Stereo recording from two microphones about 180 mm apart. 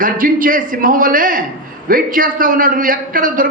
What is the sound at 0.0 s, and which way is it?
A man's voice, 50° right (ahead or behind).